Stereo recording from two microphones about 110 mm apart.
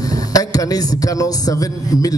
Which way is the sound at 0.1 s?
35° left (ahead or behind).